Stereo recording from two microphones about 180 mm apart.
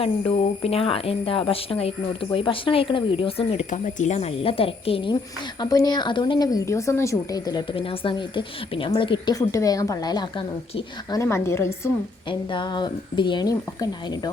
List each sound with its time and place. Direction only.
0.0 s a woman's voice: 30° left (ahead or behind)
11.2 s a woman's voice: 15° left (ahead or behind)
12.3 s a woman's voice: 25° left (ahead or behind)